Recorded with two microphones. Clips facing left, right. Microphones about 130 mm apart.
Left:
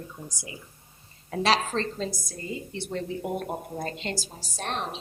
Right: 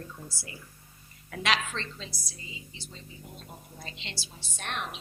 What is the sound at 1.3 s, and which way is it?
A woman's voice, 35° left (ahead or behind).